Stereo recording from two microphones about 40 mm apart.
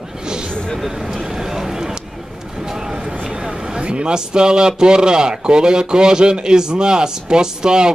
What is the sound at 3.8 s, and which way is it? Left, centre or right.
A man's voice, right.